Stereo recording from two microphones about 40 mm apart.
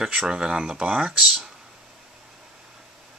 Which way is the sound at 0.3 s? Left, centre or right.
Right.